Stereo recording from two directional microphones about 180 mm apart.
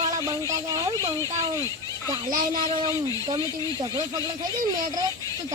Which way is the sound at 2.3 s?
20° right (ahead or behind).